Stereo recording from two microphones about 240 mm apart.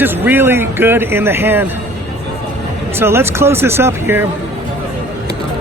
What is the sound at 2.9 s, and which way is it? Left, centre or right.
Speech, centre.